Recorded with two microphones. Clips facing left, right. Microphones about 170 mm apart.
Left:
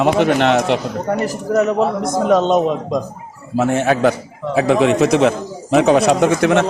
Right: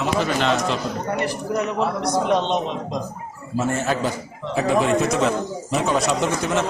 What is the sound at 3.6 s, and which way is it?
A man's voice, 70° left (ahead or behind).